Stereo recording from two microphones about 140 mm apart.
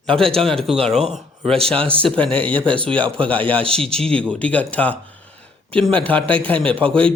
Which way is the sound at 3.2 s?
10° left (ahead or behind).